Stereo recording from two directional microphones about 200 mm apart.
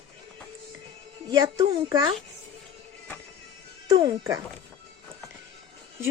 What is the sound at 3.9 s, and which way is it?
Speech, 20° right (ahead or behind).